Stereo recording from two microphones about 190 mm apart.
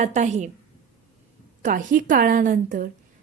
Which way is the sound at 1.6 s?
45° right (ahead or behind).